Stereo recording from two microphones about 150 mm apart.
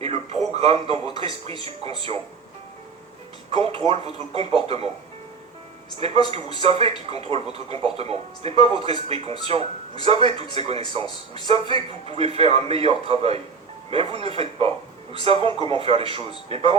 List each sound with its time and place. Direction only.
0.0 s a man's voice: 45° right (ahead or behind)
3.5 s speech: 40° right (ahead or behind)
6.0 s speech: 40° right (ahead or behind)
11.0 s speech: 30° left (ahead or behind)
11.4 s a man's voice: 40° right (ahead or behind)